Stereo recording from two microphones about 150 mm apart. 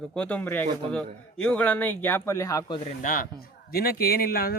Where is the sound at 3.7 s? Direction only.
90° left.